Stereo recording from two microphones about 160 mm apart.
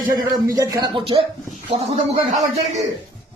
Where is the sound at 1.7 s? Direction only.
40° right (ahead or behind).